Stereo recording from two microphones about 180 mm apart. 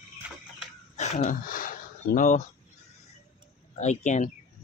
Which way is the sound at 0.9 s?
40° left (ahead or behind).